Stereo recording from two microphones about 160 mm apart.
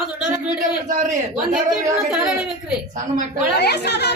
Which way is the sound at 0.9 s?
50° right (ahead or behind).